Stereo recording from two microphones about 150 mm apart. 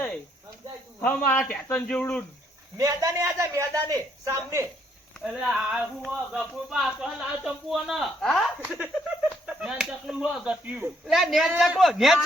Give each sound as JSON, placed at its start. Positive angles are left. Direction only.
{"t": 1.0, "sound": "speech", "side_deg": 10}
{"t": 2.7, "sound": "a man's voice", "side_deg": -20}
{"t": 5.2, "sound": "speech", "side_deg": -5}